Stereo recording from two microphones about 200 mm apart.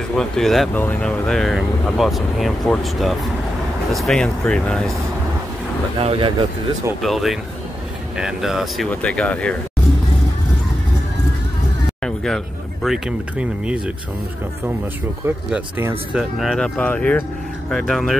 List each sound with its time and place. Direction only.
0.1 s speech: centre (ahead or behind)
5.9 s speech: 25° right (ahead or behind)
7.0 s speech: centre (ahead or behind)
12.0 s speech: 5° left (ahead or behind)
15.2 s speech: 10° right (ahead or behind)